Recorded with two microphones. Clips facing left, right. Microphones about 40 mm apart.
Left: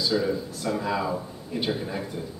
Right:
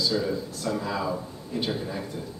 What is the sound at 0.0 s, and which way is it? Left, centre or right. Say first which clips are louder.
Speech: left 1 dB; centre.